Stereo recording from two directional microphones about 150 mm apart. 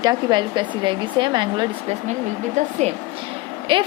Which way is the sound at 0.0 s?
25° right (ahead or behind).